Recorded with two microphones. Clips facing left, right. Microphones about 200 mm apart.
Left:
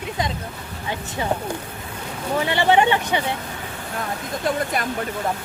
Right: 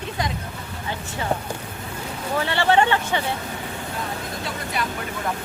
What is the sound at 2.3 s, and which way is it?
Speech, 15° left (ahead or behind).